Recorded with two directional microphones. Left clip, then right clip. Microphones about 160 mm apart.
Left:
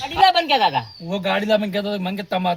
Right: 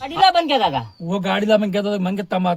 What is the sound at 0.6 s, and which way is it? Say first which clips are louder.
Speech: left 1 dB; 45° right (ahead or behind).